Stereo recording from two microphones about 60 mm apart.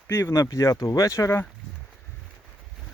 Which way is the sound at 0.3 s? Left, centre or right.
Left.